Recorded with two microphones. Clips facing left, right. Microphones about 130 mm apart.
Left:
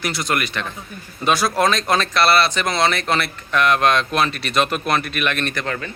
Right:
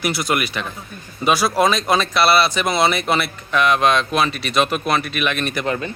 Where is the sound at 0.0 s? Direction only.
10° right (ahead or behind).